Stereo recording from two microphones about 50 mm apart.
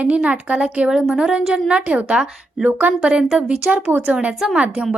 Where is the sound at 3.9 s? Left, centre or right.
Right.